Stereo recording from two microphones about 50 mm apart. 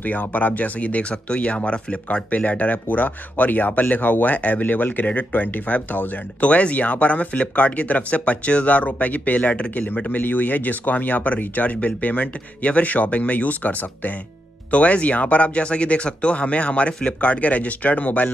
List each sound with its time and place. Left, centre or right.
0.0 s speech: left